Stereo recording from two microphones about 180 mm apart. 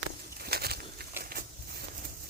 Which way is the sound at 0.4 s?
60° right (ahead or behind).